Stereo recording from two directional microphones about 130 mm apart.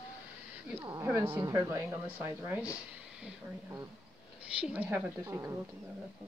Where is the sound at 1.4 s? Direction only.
25° right (ahead or behind).